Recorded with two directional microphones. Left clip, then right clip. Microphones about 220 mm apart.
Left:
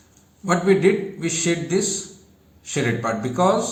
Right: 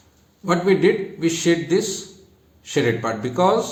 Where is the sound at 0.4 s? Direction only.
25° right (ahead or behind).